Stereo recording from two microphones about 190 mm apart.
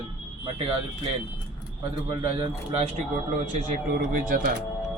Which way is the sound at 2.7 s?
35° right (ahead or behind).